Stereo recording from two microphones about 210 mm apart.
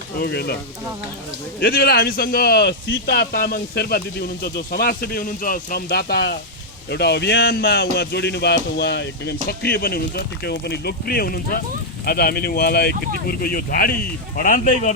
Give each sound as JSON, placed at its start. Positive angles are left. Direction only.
{"t": 0.2, "sound": "speech", "side_deg": 50}
{"t": 1.5, "sound": "speech", "side_deg": 50}